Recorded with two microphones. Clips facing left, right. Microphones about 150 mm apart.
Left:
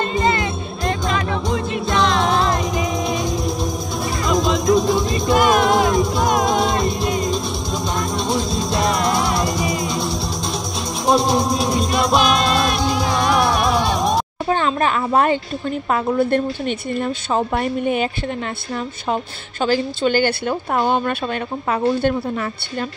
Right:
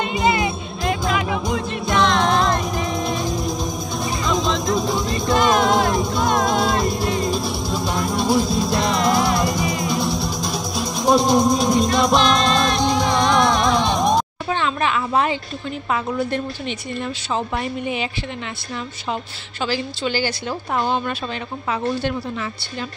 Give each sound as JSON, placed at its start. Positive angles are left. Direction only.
{"t": 0.0, "sound": "music", "side_deg": -10}
{"t": 1.7, "sound": "music", "side_deg": 0}
{"t": 4.3, "sound": "a sound", "side_deg": 5}
{"t": 5.1, "sound": "music", "side_deg": 15}
{"t": 5.9, "sound": "music", "side_deg": 0}
{"t": 6.2, "sound": "music", "side_deg": 20}
{"t": 7.2, "sound": "music", "side_deg": -5}
{"t": 9.6, "sound": "music", "side_deg": 25}
{"t": 9.8, "sound": "music", "side_deg": 0}
{"t": 14.5, "sound": "a sound", "side_deg": 45}
{"t": 15.9, "sound": "a woman's voice", "side_deg": 55}
{"t": 19.6, "sound": "a woman's voice", "side_deg": 50}